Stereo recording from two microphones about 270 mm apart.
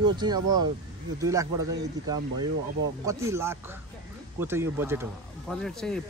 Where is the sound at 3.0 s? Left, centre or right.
Centre.